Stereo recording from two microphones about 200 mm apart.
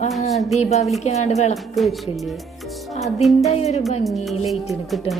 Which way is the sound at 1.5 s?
Centre (ahead or behind).